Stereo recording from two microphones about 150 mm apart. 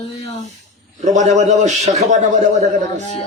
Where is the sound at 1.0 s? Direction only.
50° right (ahead or behind).